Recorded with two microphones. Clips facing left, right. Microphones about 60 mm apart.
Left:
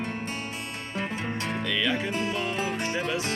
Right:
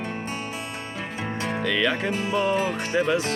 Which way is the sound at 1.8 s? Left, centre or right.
Right.